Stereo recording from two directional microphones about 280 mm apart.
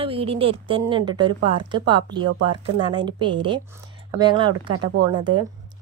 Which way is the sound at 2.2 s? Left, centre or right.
Right.